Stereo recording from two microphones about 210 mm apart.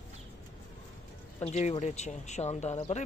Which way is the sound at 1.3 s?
30° left (ahead or behind).